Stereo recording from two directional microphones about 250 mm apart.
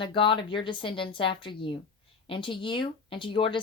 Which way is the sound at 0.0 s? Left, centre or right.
Centre.